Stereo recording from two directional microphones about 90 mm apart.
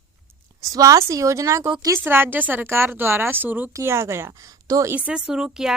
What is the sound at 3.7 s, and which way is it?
Speech, 30° right (ahead or behind).